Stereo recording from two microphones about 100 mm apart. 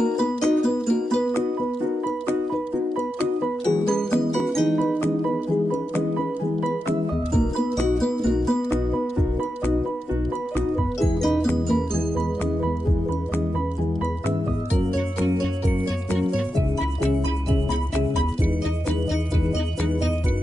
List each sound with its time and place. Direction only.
0.0 s music: 5° left (ahead or behind)
3.8 s music: 5° left (ahead or behind)
7.3 s music: 5° left (ahead or behind)
11.0 s music: centre (ahead or behind)